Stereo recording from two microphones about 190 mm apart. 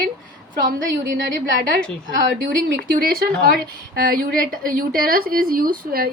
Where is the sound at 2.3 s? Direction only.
50° right (ahead or behind).